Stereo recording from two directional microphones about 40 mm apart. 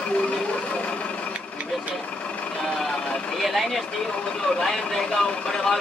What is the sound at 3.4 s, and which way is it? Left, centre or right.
Vehicle, centre.